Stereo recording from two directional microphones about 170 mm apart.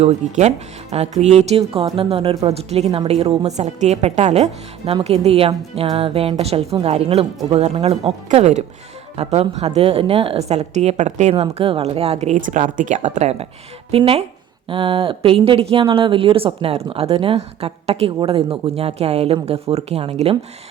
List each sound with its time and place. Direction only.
0.0 s a woman's voice: 40° right (ahead or behind)